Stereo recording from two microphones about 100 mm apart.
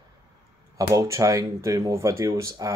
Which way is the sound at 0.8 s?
35° right (ahead or behind).